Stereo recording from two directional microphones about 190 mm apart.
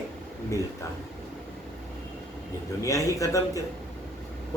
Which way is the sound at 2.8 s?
15° left (ahead or behind).